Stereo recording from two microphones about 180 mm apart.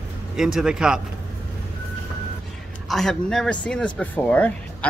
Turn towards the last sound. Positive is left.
turn(degrees=10)  # may be behind; listen again after turning